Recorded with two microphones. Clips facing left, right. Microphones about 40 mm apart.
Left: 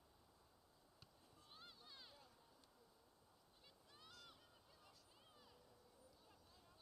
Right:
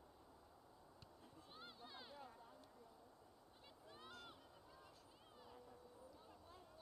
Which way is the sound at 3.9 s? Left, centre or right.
Right.